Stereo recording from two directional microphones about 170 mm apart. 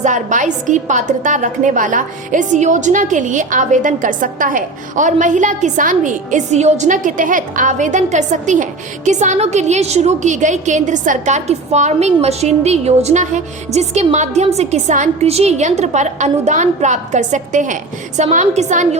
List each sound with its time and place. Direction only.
0.0 s a woman's voice: 45° right (ahead or behind)